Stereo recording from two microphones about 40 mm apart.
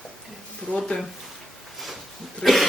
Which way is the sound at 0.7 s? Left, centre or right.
Left.